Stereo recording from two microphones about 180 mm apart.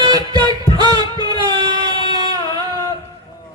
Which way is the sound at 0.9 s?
20° right (ahead or behind).